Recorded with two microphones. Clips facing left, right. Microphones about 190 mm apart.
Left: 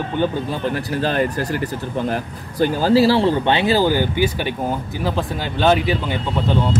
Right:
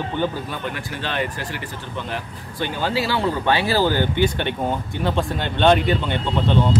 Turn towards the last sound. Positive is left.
turn(degrees=5)  # may be behind; listen again after turning